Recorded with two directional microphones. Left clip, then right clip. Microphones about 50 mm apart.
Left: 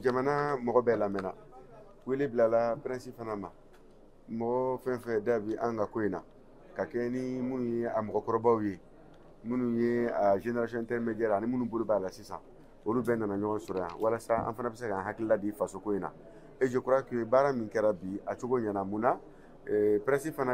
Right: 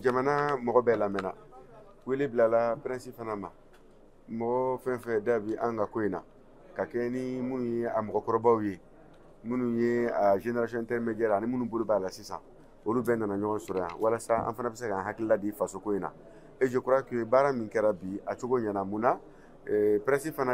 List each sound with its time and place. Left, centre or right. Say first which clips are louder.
0.0 s speech: right 2 dB; centre